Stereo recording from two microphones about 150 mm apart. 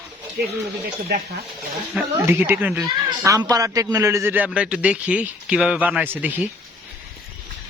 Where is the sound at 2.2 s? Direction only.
15° right (ahead or behind).